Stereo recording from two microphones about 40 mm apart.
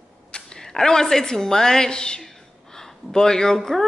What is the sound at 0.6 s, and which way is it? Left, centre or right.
A woman's voice, centre.